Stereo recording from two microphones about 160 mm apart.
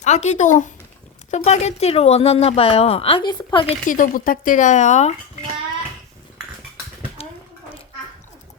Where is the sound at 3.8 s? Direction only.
55° left (ahead or behind).